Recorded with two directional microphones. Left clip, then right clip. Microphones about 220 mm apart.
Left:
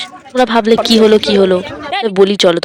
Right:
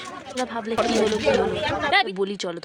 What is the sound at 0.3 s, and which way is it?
Speech, 40° left (ahead or behind).